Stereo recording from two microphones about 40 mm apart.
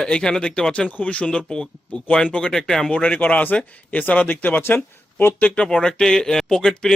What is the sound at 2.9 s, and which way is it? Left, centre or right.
Speech, left.